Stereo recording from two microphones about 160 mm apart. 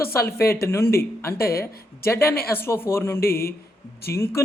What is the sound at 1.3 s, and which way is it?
Speech, 70° left (ahead or behind).